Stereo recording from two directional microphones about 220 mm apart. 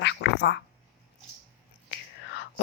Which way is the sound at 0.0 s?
50° left (ahead or behind).